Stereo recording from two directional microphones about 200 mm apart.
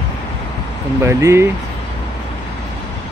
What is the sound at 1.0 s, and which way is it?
Speech, 15° right (ahead or behind).